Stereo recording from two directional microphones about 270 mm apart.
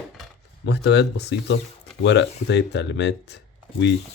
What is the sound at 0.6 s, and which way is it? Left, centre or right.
Speech, left.